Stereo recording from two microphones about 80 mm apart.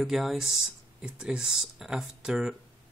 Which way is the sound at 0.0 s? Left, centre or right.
Centre.